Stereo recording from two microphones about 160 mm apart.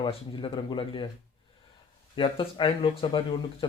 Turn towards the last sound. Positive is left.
turn(degrees=35)  # may be behind; listen again after turning